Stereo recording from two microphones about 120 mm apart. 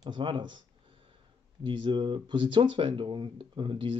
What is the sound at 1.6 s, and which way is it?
Speech, 40° right (ahead or behind).